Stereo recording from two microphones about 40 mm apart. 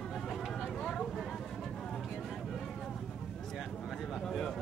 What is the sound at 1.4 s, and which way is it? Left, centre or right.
Vehicle, centre.